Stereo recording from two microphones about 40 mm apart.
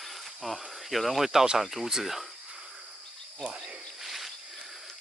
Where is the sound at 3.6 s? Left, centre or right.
Centre.